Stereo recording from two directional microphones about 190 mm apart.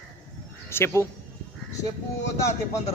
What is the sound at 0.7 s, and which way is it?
Speech, 15° left (ahead or behind).